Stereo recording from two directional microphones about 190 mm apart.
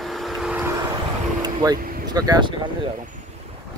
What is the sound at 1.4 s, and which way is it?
Vehicle, 20° right (ahead or behind).